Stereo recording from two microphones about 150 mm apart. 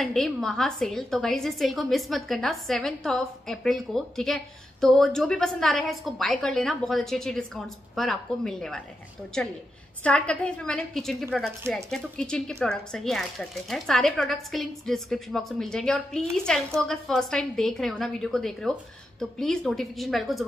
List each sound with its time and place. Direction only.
0.0 s a woman's voice: 5° left (ahead or behind)
10.0 s a woman's voice: 5° left (ahead or behind)